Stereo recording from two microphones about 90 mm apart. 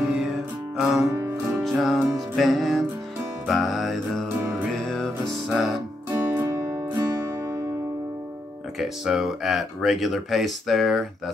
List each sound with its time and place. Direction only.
0.0 s music: 5° right (ahead or behind)
4.4 s music: 30° right (ahead or behind)
4.8 s music: 5° left (ahead or behind)
6.4 s music: 35° right (ahead or behind)
8.7 s speech: centre (ahead or behind)